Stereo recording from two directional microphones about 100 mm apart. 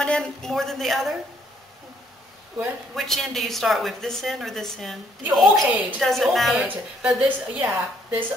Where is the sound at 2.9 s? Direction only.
Centre (ahead or behind).